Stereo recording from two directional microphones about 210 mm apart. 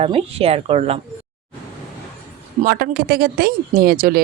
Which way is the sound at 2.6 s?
45° right (ahead or behind).